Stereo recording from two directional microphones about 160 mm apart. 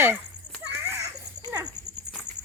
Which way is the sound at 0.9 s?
15° right (ahead or behind).